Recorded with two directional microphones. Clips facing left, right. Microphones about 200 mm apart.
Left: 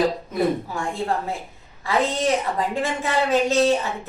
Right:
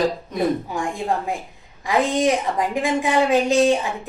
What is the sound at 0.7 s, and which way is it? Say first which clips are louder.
A woman's voice: right 1 dB; 15° right (ahead or behind).